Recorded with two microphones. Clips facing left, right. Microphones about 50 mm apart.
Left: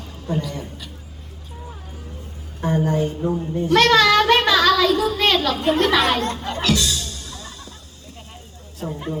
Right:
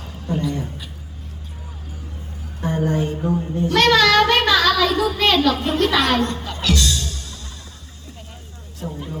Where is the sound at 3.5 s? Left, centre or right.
Centre.